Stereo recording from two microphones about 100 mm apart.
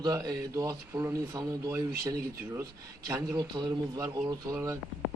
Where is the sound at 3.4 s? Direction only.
45° right (ahead or behind).